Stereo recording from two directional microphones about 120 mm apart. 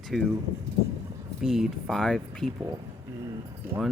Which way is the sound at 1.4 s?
Centre (ahead or behind).